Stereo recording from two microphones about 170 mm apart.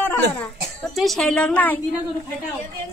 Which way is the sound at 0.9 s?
Centre (ahead or behind).